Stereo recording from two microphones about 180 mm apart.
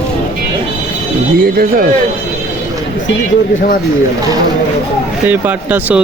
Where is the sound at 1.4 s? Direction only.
55° right (ahead or behind).